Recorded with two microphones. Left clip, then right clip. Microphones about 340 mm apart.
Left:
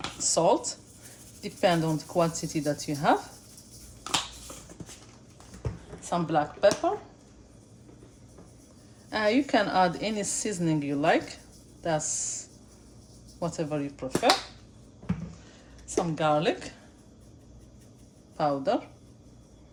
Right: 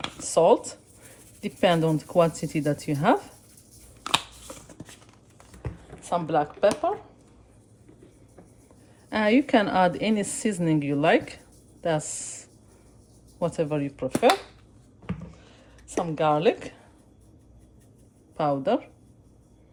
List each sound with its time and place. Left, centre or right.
0.2 s a woman's voice: right
6.0 s a woman's voice: right
9.0 s a woman's voice: right
15.9 s a woman's voice: right
18.3 s a woman's voice: right